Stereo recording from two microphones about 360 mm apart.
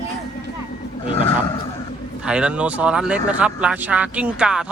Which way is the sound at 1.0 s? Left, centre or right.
Centre.